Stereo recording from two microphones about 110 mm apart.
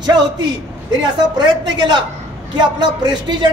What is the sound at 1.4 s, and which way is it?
A man's voice, 45° right (ahead or behind).